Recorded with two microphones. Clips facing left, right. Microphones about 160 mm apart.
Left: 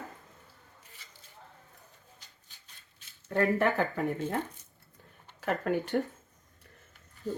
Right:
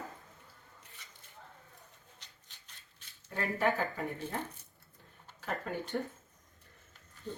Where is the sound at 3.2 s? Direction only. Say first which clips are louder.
Left 6 dB; 65° left (ahead or behind).